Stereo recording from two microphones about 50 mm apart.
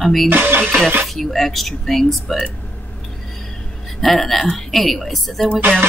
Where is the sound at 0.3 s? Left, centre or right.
Right.